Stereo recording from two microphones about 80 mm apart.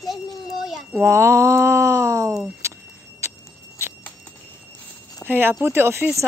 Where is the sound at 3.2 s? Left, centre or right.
Right.